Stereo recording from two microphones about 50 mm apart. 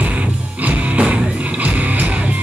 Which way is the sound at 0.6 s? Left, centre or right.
Right.